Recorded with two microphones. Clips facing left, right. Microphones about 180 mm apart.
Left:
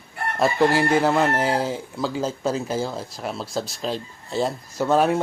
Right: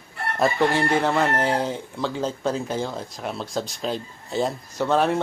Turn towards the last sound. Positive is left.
turn(degrees=10)  # may be behind; listen again after turning